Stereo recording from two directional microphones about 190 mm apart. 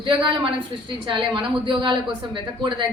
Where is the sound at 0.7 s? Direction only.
25° right (ahead or behind).